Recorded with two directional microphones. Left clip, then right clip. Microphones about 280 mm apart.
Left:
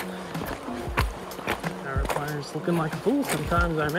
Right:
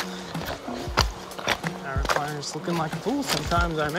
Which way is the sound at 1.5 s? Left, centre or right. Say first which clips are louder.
Right 3 dB; centre.